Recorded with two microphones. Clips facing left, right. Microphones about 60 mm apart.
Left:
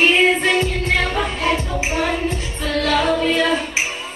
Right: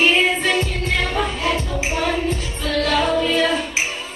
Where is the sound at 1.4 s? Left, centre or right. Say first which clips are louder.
Left 1 dB; left; by 3.6 s centre.